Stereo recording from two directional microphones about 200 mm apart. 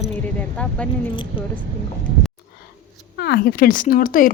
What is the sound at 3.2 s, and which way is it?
Speech, 55° left (ahead or behind).